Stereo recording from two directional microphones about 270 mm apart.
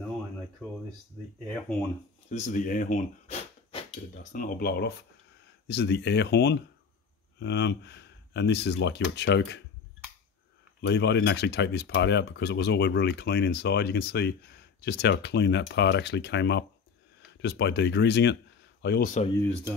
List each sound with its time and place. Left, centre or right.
2.2 s speech: left
10.8 s speech: left